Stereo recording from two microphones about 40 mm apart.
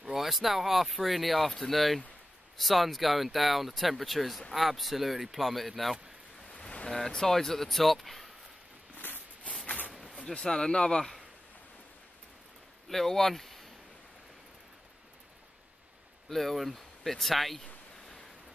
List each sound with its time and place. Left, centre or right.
0.1 s speech: centre
6.5 s vehicle: left
7.0 s speech: centre
8.9 s a sound: left
10.0 s speech: left
12.8 s speech: centre
16.3 s speech: centre